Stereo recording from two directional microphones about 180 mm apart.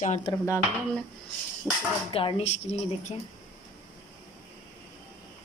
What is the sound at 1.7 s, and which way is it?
Speech, 5° right (ahead or behind).